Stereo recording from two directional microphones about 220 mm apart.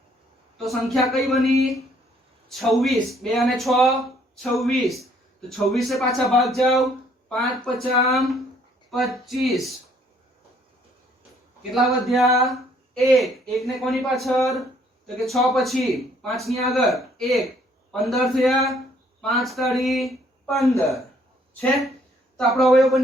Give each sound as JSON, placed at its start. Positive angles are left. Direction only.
{"t": 0.6, "sound": "speech", "side_deg": 0}
{"t": 11.7, "sound": "speech", "side_deg": 0}
{"t": 22.4, "sound": "speech", "side_deg": 0}